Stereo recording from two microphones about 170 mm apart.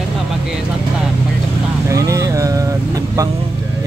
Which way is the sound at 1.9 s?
20° right (ahead or behind).